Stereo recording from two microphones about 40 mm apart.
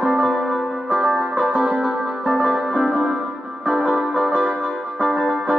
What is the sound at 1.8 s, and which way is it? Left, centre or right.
Music, centre.